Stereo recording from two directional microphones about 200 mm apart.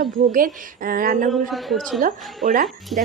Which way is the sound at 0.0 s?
45° right (ahead or behind).